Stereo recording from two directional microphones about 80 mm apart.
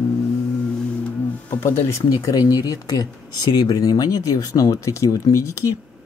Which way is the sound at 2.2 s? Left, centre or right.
Left.